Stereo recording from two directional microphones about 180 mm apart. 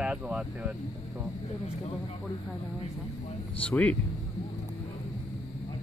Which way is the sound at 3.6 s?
5° left (ahead or behind).